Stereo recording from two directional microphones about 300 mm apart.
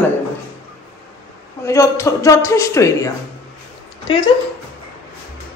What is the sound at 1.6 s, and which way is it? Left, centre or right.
Speech, centre.